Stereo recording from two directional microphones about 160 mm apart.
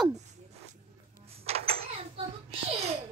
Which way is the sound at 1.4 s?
40° right (ahead or behind).